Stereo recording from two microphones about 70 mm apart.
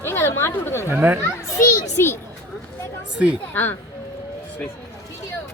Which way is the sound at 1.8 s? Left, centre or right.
Left.